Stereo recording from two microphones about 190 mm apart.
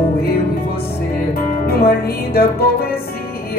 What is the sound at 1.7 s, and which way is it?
Music, 55° left (ahead or behind).